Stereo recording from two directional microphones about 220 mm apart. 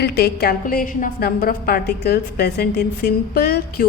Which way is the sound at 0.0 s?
45° left (ahead or behind).